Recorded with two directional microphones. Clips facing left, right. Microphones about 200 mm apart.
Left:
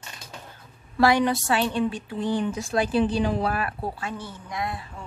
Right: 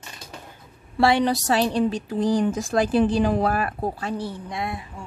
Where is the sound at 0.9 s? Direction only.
25° right (ahead or behind).